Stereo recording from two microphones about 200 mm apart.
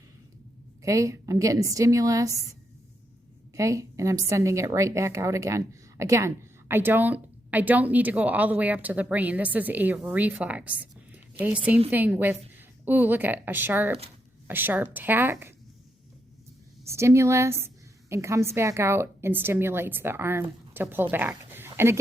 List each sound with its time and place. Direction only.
0.8 s a woman's voice: 15° right (ahead or behind)
16.9 s a woman's voice: 15° right (ahead or behind)